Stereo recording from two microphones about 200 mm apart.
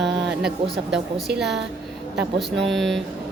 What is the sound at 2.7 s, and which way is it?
Speech, centre (ahead or behind).